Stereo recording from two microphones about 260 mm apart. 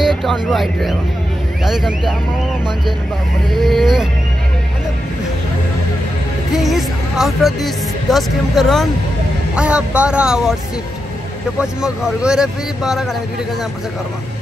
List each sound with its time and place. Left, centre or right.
0.0 s speech: centre
3.5 s speech: centre
6.5 s speech: centre
11.6 s speech: centre